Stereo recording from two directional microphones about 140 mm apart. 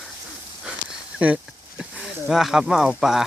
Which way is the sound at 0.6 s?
5° right (ahead or behind).